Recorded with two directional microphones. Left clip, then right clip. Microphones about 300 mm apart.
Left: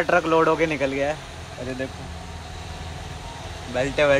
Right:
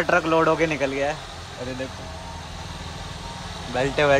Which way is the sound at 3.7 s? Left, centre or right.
Centre.